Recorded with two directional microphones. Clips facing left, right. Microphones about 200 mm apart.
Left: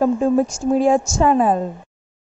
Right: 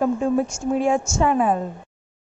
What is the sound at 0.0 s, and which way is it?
A woman's voice, 35° left (ahead or behind).